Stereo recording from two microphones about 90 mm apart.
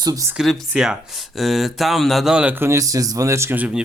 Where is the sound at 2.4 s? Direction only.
20° right (ahead or behind).